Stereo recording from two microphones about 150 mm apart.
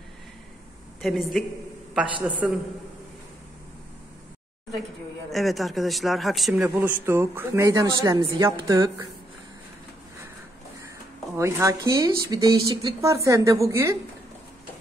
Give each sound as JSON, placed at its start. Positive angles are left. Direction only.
{"t": 1.0, "sound": "a man's voice", "side_deg": 0}
{"t": 2.4, "sound": "a man's voice", "side_deg": -10}
{"t": 5.3, "sound": "a man's voice", "side_deg": 0}
{"t": 11.3, "sound": "speech", "side_deg": -20}